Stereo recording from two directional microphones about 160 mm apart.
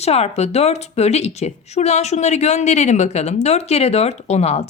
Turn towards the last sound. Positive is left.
turn(degrees=40)  # may be behind; listen again after turning